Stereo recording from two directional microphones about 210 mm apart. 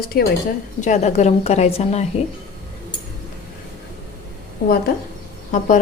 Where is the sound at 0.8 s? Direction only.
35° left (ahead or behind).